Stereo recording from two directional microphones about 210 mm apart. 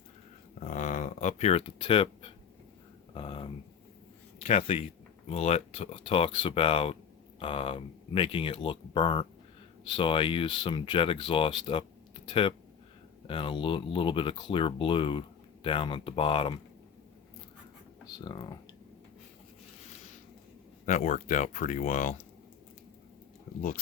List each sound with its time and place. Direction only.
0.6 s a sound: 35° left (ahead or behind)
4.4 s speech: 30° left (ahead or behind)
18.2 s speech: 20° left (ahead or behind)
20.8 s speech: 35° left (ahead or behind)
23.6 s speech: 40° left (ahead or behind)